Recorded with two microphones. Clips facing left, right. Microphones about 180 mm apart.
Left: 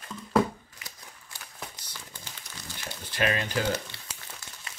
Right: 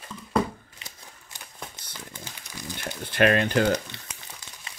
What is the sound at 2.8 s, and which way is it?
Crumpling, 55° right (ahead or behind).